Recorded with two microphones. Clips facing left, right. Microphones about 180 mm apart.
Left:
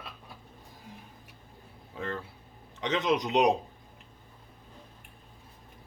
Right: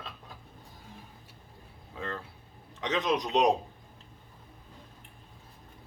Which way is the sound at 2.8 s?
25° left (ahead or behind).